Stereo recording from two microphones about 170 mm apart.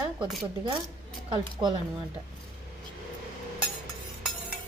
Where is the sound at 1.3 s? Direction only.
30° right (ahead or behind).